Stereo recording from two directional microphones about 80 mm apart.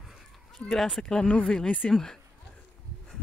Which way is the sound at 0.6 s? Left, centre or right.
Centre.